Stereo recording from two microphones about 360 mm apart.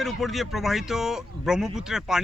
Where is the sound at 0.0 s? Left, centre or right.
Centre.